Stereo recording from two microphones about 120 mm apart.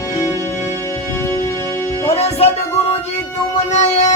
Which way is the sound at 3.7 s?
70° left (ahead or behind).